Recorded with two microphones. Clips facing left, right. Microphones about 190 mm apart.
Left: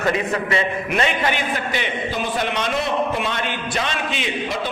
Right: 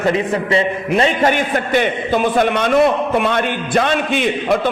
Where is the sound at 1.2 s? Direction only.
50° right (ahead or behind).